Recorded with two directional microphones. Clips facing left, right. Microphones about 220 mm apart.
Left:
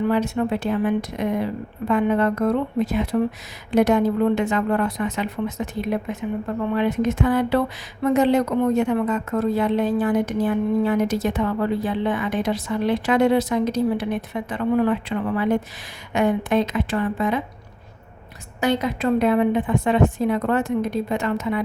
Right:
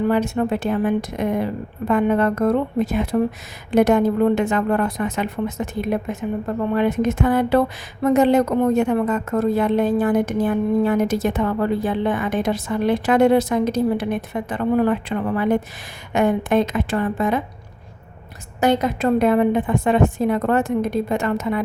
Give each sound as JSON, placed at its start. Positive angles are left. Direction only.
{"t": 0.1, "sound": "a woman's voice", "side_deg": -50}
{"t": 18.6, "sound": "a woman's voice", "side_deg": -45}